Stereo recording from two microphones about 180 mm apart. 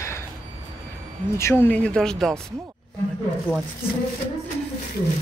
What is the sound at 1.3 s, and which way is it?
Speech, 15° left (ahead or behind).